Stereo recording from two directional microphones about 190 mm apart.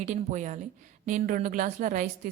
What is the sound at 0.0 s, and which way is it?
A woman's voice, 40° right (ahead or behind).